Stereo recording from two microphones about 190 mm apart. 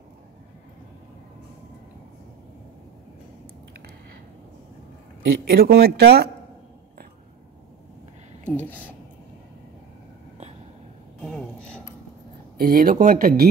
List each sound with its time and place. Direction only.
5.5 s speech: 55° right (ahead or behind)
8.5 s speech: 10° left (ahead or behind)
11.1 s a sound: 5° left (ahead or behind)
12.5 s speech: 50° right (ahead or behind)